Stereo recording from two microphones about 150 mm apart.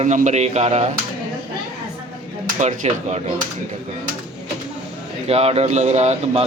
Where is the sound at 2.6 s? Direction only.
50° right (ahead or behind).